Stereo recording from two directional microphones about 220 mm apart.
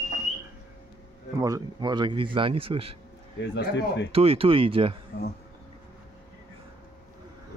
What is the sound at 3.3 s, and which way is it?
Speech, 55° left (ahead or behind).